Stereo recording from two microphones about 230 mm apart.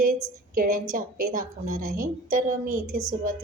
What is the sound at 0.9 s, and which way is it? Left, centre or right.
A woman's voice, right.